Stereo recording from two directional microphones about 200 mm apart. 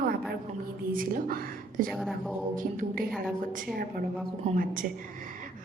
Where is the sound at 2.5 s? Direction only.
40° right (ahead or behind).